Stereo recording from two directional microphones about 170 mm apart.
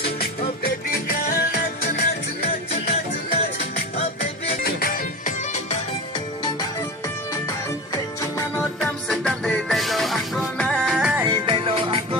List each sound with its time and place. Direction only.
0.2 s music: 60° left (ahead or behind)
4.4 s music: 60° left (ahead or behind); by 5.7 s 45° left (ahead or behind)
8.4 s music: 10° left (ahead or behind); by 11.3 s 5° right (ahead or behind)
11.3 s music: 30° right (ahead or behind)